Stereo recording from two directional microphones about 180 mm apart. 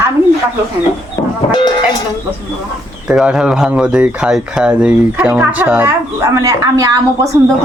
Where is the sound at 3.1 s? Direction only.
5° right (ahead or behind).